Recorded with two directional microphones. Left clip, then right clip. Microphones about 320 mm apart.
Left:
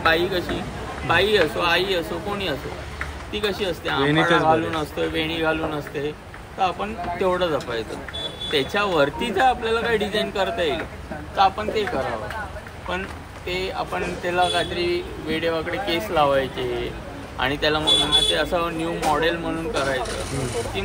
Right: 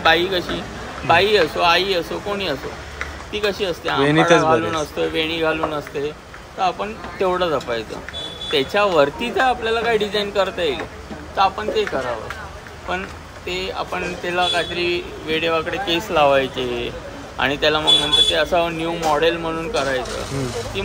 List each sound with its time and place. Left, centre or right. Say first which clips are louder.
0.0 s a man's voice: right 4 dB; centre
13.5 s a man's voice: right 2 dB; centre